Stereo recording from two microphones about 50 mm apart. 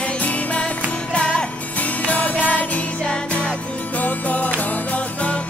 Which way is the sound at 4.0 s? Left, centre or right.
Left.